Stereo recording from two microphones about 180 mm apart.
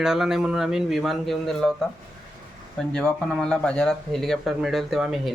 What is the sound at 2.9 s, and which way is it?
Speech, 5° left (ahead or behind).